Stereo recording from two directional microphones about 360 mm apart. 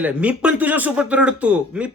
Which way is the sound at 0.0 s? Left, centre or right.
Centre.